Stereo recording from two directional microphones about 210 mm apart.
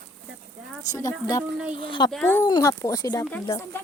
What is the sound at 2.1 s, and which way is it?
Speech, 5° left (ahead or behind).